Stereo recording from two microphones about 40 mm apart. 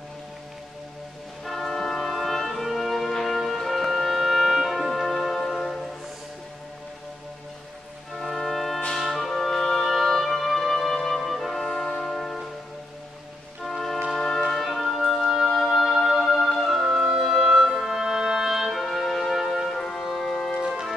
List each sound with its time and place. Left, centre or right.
1.4 s music: centre
8.2 s music: centre
13.7 s music: centre
14.1 s brass instrument: centre
14.6 s music: centre
20.6 s music: centre